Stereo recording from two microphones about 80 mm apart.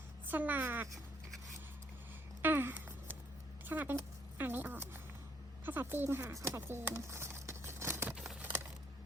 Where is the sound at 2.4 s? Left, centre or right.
Right.